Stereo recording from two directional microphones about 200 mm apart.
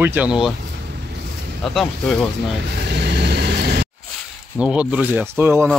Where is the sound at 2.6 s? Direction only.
55° right (ahead or behind).